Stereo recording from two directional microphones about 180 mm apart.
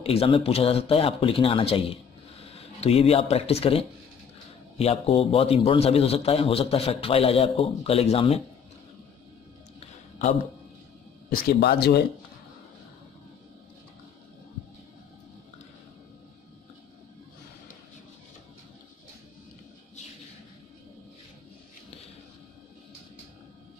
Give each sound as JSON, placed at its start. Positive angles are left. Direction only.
{"t": 0.0, "sound": "a man's voice", "side_deg": 30}
{"t": 11.2, "sound": "speech", "side_deg": 60}